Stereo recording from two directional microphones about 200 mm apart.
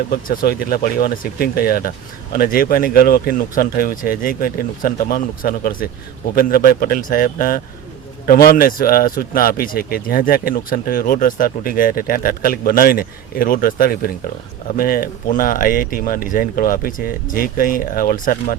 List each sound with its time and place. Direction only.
0.1 s speech: 50° left (ahead or behind)